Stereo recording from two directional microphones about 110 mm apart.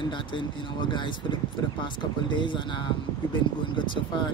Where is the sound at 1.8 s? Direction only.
45° left (ahead or behind).